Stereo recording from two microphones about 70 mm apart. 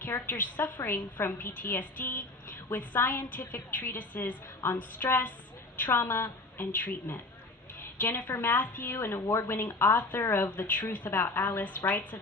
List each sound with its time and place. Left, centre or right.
0.0 s a woman's voice: left
7.8 s a sound: left
8.3 s a woman's voice: left
8.9 s a woman's voice: left